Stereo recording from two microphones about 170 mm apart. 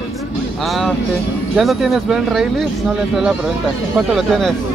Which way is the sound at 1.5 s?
Centre (ahead or behind).